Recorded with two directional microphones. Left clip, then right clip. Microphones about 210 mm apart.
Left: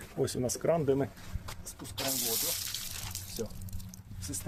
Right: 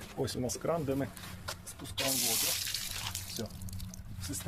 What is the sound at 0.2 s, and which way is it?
Speech, 40° left (ahead or behind).